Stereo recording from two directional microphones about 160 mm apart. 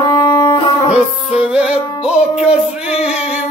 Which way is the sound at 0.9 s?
5° right (ahead or behind).